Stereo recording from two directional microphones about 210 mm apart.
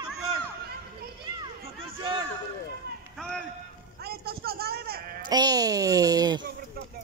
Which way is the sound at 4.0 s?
50° right (ahead or behind).